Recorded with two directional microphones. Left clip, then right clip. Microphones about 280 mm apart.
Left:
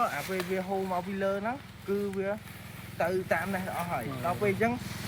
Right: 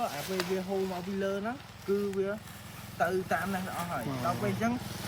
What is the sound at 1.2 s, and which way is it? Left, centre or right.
Speech, centre.